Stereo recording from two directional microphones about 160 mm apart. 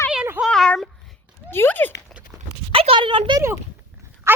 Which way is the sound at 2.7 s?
35° right (ahead or behind).